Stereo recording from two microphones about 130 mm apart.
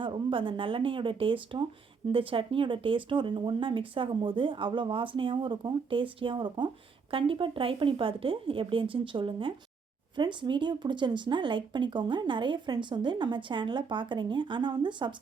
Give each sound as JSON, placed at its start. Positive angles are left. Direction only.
{"t": 0.0, "sound": "speech", "side_deg": -40}